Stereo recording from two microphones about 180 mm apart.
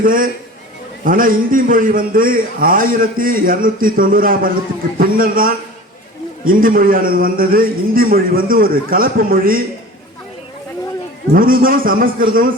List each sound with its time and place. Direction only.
0.0 s a man's voice: 50° right (ahead or behind)
11.3 s a man's voice: 50° right (ahead or behind)